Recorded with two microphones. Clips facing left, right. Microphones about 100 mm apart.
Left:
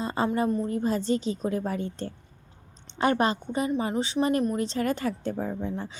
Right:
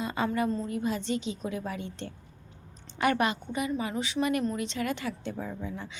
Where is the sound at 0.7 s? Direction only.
40° left (ahead or behind).